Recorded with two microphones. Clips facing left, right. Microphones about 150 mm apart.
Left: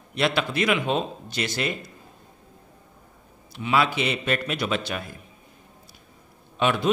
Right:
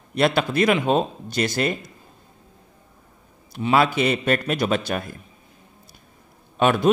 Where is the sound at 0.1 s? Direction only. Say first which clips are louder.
Right 4 dB; 45° right (ahead or behind).